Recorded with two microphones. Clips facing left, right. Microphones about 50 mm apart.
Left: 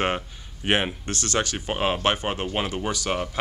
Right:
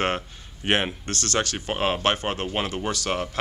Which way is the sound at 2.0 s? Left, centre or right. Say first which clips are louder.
Even; centre.